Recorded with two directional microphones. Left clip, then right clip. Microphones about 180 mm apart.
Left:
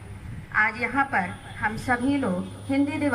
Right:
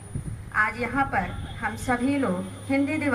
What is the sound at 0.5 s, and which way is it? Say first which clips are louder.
A woman's voice: left 1 dB; 40° right (ahead or behind).